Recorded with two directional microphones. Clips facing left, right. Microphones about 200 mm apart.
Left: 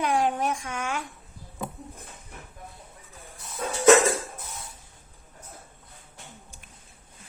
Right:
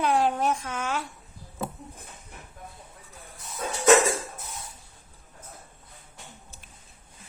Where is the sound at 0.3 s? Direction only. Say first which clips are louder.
Right 2 dB; 10° left (ahead or behind).